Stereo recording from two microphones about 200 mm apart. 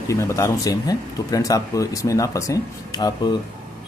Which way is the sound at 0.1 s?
15° left (ahead or behind).